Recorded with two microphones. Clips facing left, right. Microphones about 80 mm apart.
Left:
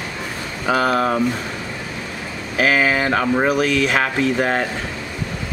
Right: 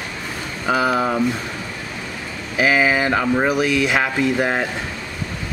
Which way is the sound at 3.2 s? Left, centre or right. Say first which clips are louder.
Left 1 dB; centre.